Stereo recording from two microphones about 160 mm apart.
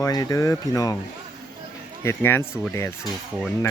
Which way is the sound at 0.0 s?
20° left (ahead or behind).